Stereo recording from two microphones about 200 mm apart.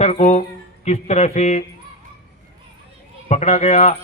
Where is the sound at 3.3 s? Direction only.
35° left (ahead or behind).